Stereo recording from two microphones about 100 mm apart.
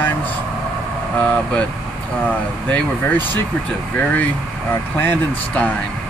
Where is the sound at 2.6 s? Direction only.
15° left (ahead or behind).